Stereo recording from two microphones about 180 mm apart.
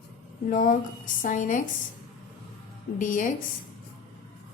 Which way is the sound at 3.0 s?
45° left (ahead or behind).